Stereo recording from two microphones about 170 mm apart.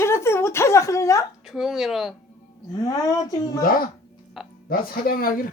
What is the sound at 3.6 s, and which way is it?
Speech, 60° left (ahead or behind).